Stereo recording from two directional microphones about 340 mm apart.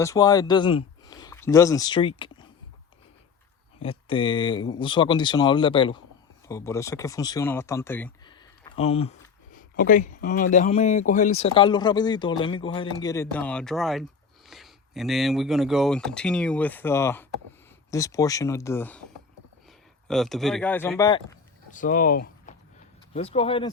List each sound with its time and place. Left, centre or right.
0.0 s speech: centre
3.8 s speech: centre
20.1 s speech: centre